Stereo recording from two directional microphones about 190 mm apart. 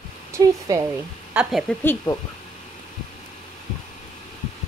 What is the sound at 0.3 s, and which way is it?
Speech, 15° right (ahead or behind).